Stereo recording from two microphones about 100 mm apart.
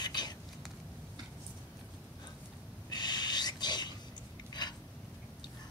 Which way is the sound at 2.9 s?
45° left (ahead or behind).